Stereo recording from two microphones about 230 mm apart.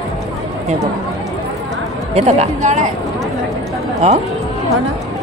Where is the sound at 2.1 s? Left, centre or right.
Right.